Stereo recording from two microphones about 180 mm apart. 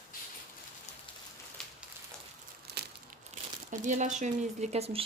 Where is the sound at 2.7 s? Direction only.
60° right (ahead or behind).